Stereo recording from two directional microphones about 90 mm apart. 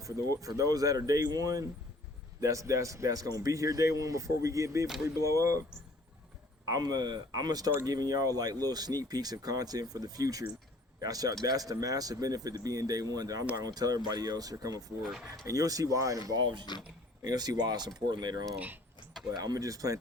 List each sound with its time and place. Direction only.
0.0 s speech: 40° right (ahead or behind)
6.7 s speech: 45° right (ahead or behind)
15.0 s speech: 5° right (ahead or behind)
15.4 s speech: 40° right (ahead or behind)
16.3 s speech: 55° right (ahead or behind)
17.2 s speech: 45° right (ahead or behind)